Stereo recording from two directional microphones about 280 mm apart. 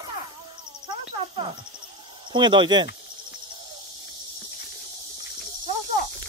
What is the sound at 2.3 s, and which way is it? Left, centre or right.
Speech, centre.